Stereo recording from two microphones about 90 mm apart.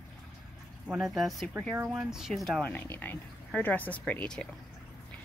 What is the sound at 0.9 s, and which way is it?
Speech, centre (ahead or behind).